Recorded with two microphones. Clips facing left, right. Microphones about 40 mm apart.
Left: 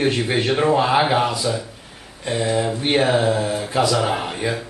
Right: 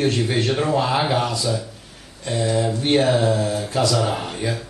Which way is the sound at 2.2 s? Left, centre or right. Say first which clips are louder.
Left 1 dB; left.